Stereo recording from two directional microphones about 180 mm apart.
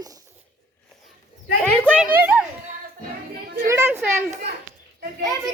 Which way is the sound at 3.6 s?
15° right (ahead or behind).